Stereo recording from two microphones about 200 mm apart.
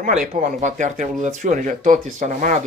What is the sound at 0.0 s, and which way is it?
Speech, 40° right (ahead or behind).